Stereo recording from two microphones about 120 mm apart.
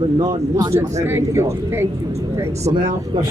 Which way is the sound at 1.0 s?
20° right (ahead or behind).